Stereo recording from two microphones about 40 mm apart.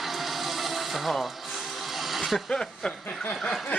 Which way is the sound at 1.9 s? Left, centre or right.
Centre.